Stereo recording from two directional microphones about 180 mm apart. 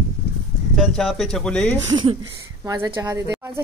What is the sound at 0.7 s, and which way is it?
Speech, centre (ahead or behind).